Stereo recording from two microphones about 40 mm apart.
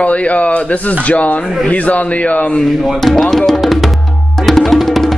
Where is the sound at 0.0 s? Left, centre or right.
Left.